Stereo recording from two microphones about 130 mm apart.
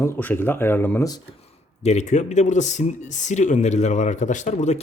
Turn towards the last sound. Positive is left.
turn(degrees=65)  # may be behind; listen again after turning